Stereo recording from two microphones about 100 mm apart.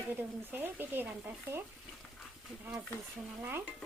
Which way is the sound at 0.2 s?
20° right (ahead or behind).